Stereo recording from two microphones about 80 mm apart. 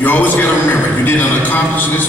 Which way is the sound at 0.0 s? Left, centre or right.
Left.